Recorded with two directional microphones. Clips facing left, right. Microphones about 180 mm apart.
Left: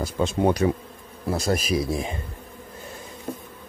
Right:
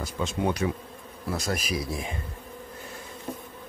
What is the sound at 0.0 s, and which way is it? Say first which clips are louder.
Speech: left 6 dB; 35° left (ahead or behind).